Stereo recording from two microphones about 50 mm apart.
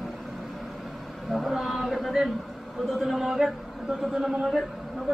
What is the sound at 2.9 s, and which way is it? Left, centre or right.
A man's voice, centre.